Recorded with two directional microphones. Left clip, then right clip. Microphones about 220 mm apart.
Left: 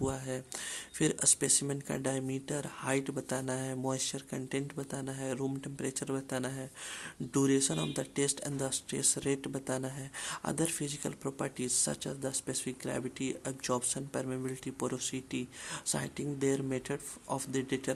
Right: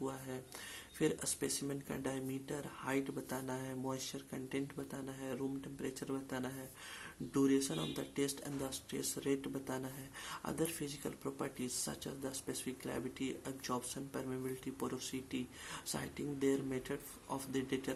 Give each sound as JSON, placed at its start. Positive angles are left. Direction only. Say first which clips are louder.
{"t": 0.0, "sound": "speech", "louder": "left 7 dB", "side_deg": 45}